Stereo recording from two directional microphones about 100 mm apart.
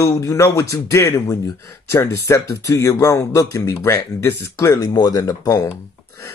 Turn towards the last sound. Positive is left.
turn(degrees=35)  # may be behind; listen again after turning